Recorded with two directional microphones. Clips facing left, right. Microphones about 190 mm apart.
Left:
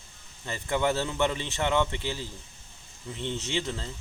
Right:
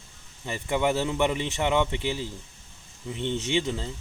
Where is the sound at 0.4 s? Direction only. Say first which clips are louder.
Right 2 dB; 15° right (ahead or behind).